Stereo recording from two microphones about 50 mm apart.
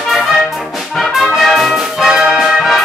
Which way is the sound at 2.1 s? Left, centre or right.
Centre.